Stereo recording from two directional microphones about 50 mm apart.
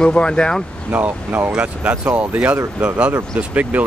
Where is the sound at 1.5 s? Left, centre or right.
Right.